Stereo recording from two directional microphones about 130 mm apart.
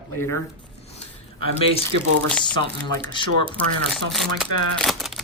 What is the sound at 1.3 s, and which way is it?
Speech, 45° left (ahead or behind).